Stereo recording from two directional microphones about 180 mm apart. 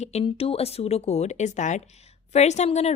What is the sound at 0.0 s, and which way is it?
A woman's voice, 35° left (ahead or behind).